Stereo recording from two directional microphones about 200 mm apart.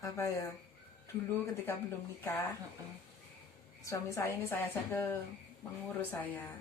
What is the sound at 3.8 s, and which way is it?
A woman's voice, 15° left (ahead or behind).